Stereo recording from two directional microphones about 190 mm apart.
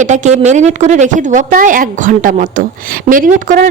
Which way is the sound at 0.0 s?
40° right (ahead or behind).